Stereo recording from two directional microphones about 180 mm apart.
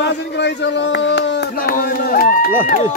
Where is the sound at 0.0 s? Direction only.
70° left (ahead or behind).